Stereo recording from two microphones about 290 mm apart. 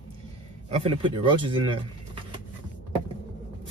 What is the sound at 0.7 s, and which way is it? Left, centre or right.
Speech, centre.